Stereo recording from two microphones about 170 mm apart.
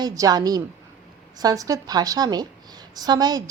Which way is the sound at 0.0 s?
20° right (ahead or behind).